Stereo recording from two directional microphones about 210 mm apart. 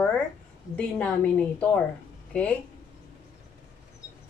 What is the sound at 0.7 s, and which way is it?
Speech, 5° left (ahead or behind).